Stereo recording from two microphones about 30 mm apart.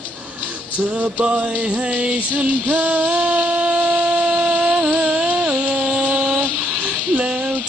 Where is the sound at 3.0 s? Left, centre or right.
Right.